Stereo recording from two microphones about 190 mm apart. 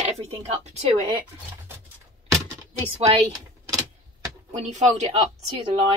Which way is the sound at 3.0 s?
30° right (ahead or behind).